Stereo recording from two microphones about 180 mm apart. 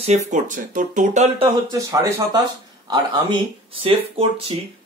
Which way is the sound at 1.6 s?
20° right (ahead or behind).